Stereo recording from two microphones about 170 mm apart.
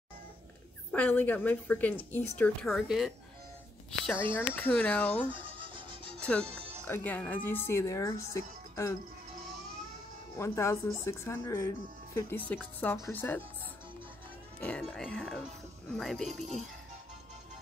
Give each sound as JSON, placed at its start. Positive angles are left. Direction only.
{"t": 0.9, "sound": "speech", "side_deg": 10}
{"t": 4.4, "sound": "speech", "side_deg": 10}
{"t": 5.3, "sound": "music", "side_deg": -30}
{"t": 6.2, "sound": "speech", "side_deg": 5}
{"t": 10.3, "sound": "speech", "side_deg": 15}
{"t": 14.6, "sound": "speech", "side_deg": 5}